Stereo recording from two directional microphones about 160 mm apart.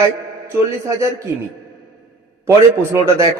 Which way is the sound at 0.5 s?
20° right (ahead or behind).